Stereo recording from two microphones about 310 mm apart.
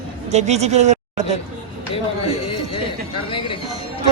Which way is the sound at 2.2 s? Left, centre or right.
Centre.